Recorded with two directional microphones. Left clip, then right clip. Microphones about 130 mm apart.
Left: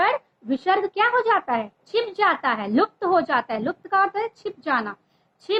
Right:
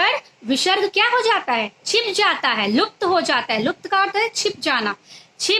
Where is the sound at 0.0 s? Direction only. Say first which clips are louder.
Right 2 dB; 20° right (ahead or behind).